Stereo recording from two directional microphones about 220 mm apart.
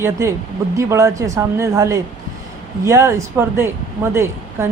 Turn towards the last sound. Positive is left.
turn(degrees=-10)  # may be behind; listen again after turning